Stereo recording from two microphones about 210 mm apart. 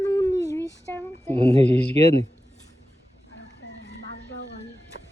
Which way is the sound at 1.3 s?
30° right (ahead or behind).